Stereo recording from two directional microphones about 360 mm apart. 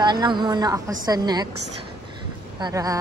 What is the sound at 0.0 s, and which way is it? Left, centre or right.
Speech, centre.